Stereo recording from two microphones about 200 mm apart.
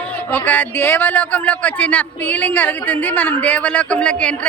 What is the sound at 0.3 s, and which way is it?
Speech, 5° left (ahead or behind).